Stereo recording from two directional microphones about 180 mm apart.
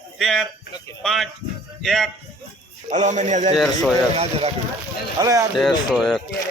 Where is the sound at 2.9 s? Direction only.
40° right (ahead or behind).